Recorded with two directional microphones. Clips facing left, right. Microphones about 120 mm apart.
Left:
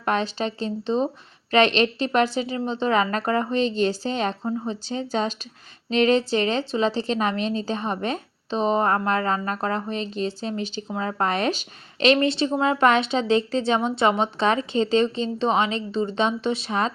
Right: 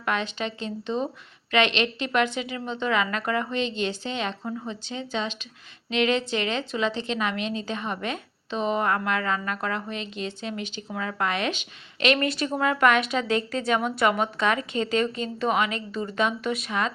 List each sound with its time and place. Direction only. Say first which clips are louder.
0.0 s a woman's voice: left 4 dB; 35° left (ahead or behind)